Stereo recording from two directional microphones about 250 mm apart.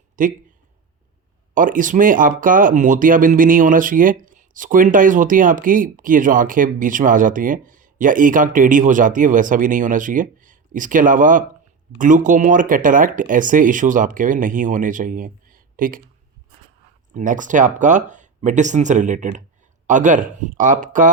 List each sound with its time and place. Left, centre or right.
0.2 s speech: right
1.5 s speech: right
17.2 s speech: right